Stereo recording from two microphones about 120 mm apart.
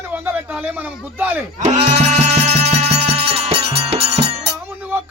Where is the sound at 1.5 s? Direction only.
75° right (ahead or behind).